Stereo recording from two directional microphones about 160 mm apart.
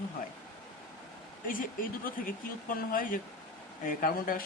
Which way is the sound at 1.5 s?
60° left (ahead or behind).